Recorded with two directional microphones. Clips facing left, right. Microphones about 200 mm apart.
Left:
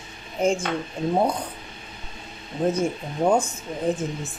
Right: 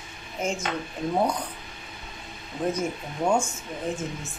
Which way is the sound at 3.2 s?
35° left (ahead or behind).